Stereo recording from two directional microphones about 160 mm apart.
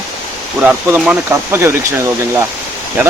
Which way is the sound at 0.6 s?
10° right (ahead or behind).